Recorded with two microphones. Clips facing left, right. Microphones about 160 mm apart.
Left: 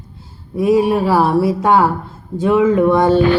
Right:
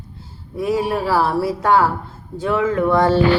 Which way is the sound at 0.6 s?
15° left (ahead or behind).